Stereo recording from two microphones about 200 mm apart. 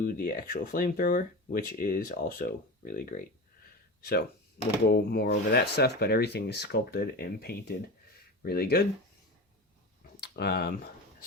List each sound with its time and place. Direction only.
0.0 s speech: 45° left (ahead or behind)
10.2 s speech: 55° left (ahead or behind)